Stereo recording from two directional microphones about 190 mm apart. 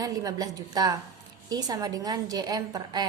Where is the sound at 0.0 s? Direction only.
20° right (ahead or behind).